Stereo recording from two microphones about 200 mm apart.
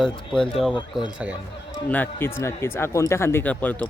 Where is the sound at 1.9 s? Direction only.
10° left (ahead or behind).